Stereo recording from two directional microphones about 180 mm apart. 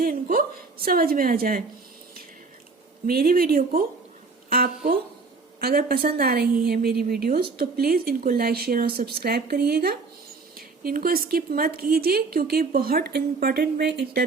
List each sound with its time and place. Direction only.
0.0 s a woman's voice: 50° right (ahead or behind)
3.1 s a woman's voice: 55° right (ahead or behind)
4.4 s a sound: 55° right (ahead or behind)
5.5 s a woman's voice: 55° right (ahead or behind)